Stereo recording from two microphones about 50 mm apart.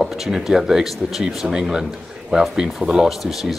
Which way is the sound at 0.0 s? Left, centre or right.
Centre.